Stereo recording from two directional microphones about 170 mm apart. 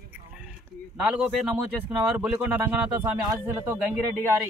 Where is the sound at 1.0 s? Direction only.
5° right (ahead or behind).